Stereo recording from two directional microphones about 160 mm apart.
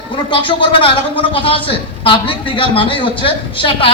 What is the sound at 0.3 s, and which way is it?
Speech, 30° left (ahead or behind).